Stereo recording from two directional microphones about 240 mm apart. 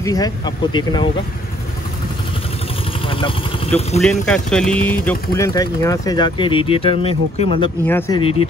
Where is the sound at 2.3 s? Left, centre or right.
Left.